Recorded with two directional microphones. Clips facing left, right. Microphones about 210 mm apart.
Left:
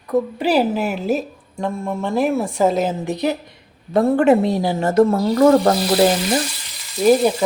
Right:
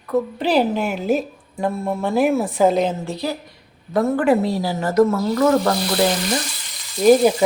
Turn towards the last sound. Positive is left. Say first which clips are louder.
# right 1 dB
turn(degrees=0)  # may be behind; listen again after turning